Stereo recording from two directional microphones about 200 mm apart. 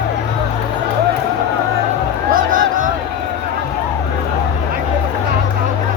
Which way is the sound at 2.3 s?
45° right (ahead or behind).